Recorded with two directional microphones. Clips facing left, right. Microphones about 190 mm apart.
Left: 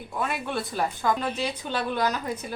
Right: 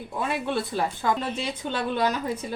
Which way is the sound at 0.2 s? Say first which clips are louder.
Right 2 dB; 25° right (ahead or behind).